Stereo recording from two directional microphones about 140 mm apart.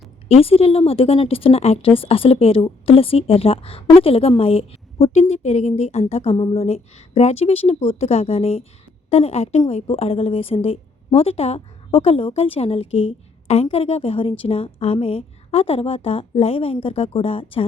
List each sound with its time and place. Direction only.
0.3 s a woman's voice: 45° left (ahead or behind)